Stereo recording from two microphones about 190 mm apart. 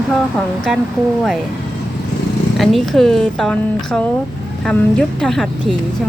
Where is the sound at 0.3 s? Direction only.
Centre (ahead or behind).